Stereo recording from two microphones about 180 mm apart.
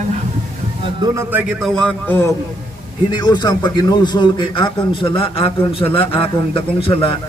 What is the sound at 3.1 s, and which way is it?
A man's voice, 25° left (ahead or behind).